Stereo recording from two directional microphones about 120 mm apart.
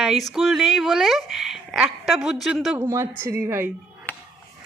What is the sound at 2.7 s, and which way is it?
Speech, 20° right (ahead or behind).